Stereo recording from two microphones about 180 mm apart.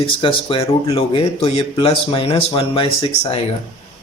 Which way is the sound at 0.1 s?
30° left (ahead or behind).